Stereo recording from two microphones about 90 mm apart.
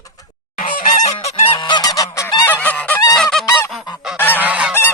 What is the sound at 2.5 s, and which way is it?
Goose, 20° left (ahead or behind).